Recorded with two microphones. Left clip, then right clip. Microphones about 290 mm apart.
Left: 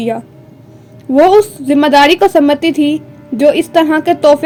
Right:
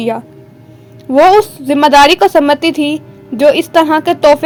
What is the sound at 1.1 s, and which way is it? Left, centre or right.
A woman's voice, centre.